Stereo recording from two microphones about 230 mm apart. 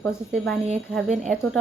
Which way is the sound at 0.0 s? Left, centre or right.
Centre.